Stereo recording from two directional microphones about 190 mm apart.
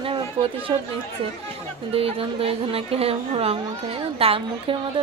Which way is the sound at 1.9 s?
30° right (ahead or behind).